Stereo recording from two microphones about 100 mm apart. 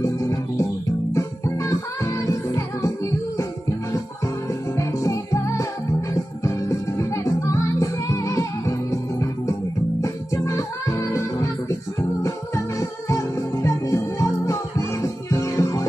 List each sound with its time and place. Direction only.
0.0 s music: 30° left (ahead or behind)
4.7 s music: 30° left (ahead or behind)
10.0 s music: 30° left (ahead or behind)
13.1 s music: 35° left (ahead or behind)